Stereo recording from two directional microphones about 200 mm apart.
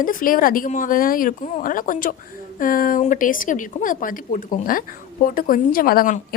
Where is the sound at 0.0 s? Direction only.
45° left (ahead or behind).